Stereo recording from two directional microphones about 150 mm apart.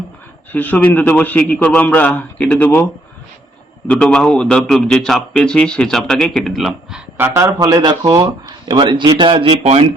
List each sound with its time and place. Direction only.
0.5 s a man's voice: 10° left (ahead or behind)
3.9 s a man's voice: 5° left (ahead or behind)
7.2 s speech: 20° right (ahead or behind); by 9.9 s 45° right (ahead or behind)